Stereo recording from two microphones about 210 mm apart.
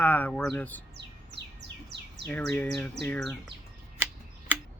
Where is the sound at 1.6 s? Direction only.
55° right (ahead or behind).